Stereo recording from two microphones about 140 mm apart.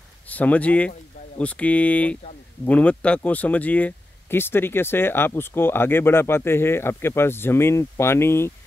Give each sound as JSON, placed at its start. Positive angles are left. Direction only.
{"t": 0.3, "sound": "speech", "side_deg": 10}